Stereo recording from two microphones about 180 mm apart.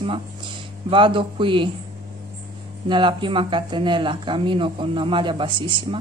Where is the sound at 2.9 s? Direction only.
25° right (ahead or behind).